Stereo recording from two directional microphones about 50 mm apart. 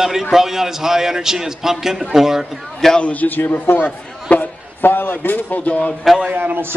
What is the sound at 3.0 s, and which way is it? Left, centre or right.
A man's voice, left.